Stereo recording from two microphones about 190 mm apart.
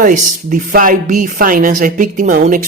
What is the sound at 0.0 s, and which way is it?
Speech, 45° right (ahead or behind).